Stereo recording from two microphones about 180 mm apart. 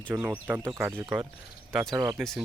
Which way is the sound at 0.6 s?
20° right (ahead or behind).